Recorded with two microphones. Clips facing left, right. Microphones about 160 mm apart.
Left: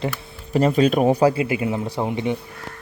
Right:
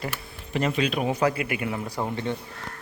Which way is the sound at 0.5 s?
40° left (ahead or behind).